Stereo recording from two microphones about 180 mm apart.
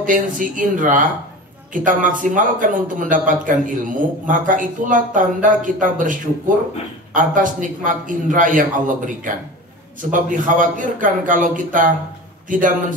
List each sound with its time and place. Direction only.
0.0 s a man's voice: 45° right (ahead or behind)
7.2 s a man's voice: 45° right (ahead or behind)